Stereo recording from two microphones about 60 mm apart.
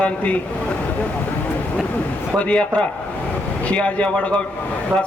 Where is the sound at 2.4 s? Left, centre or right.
Centre.